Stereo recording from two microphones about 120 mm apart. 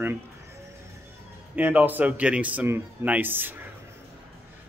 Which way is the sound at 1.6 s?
15° right (ahead or behind).